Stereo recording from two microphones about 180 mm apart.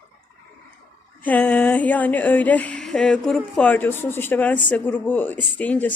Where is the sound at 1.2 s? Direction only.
10° left (ahead or behind).